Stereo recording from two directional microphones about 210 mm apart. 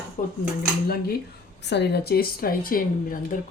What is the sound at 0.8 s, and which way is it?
A woman's voice, 45° left (ahead or behind).